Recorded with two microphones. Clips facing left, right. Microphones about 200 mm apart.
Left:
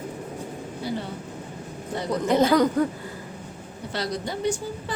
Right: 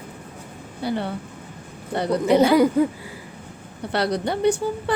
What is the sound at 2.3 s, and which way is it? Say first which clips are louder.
Speech: right 3 dB; 10° right (ahead or behind).